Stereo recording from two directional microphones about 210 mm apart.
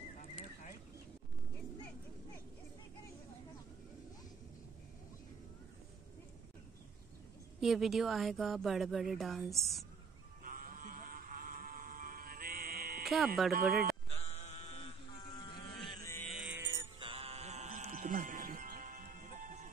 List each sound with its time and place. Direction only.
7.6 s speech: centre (ahead or behind)
10.4 s music: 40° right (ahead or behind)
13.0 s music: centre (ahead or behind)
13.5 s speech: 45° right (ahead or behind)
14.1 s sheep: 30° left (ahead or behind)
15.2 s a sound: 20° left (ahead or behind)
16.0 s music: 10° left (ahead or behind)
16.3 s music: 5° right (ahead or behind)
16.6 s music: 20° right (ahead or behind); by 19.7 s 40° right (ahead or behind)